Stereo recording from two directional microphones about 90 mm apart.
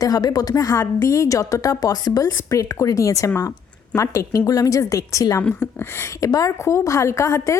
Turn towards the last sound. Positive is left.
turn(degrees=35)  # may be behind; listen again after turning